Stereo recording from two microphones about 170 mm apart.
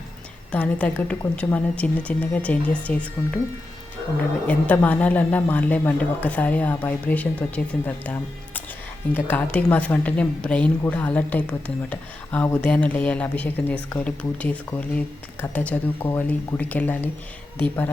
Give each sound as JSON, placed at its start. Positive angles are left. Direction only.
{"t": 0.5, "sound": "a woman's voice", "side_deg": 10}
{"t": 4.4, "sound": "a woman's voice", "side_deg": 10}